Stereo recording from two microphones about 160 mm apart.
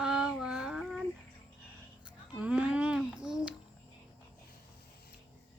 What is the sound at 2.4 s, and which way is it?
Speech, 5° right (ahead or behind).